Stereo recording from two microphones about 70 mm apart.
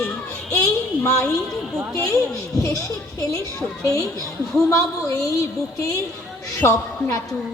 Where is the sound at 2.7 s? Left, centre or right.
Left.